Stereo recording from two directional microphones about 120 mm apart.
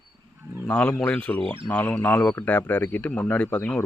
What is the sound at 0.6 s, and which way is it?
Speech, 10° left (ahead or behind).